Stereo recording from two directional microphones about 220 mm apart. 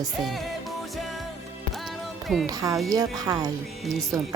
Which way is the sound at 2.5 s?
15° right (ahead or behind).